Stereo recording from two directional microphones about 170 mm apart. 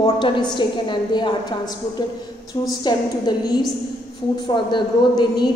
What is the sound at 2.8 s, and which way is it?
A woman's voice, 25° left (ahead or behind).